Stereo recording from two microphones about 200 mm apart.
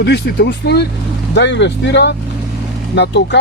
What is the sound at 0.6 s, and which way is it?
Speech, 55° left (ahead or behind).